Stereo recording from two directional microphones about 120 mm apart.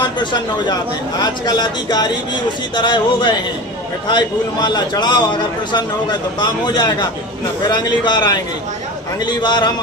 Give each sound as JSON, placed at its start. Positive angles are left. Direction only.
{"t": 1.2, "sound": "a man's voice", "side_deg": 35}
{"t": 4.6, "sound": "a man's voice", "side_deg": 35}